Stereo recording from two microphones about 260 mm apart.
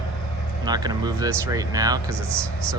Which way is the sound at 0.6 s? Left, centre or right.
Centre.